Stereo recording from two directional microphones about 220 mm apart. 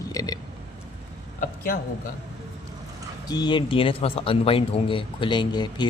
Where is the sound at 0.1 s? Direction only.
15° left (ahead or behind).